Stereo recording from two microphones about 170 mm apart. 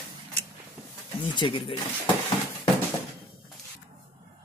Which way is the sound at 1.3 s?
30° left (ahead or behind).